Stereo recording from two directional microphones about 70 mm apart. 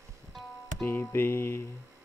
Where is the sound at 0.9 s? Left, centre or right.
Left.